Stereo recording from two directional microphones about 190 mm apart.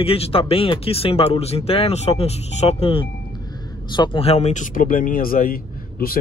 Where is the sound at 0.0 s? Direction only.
30° left (ahead or behind).